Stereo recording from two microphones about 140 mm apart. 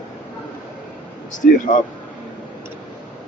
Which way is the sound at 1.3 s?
65° left (ahead or behind).